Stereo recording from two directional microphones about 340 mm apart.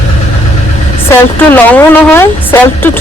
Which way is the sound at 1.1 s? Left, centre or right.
Centre.